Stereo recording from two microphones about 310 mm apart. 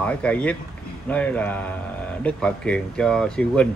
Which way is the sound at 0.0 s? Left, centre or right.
Centre.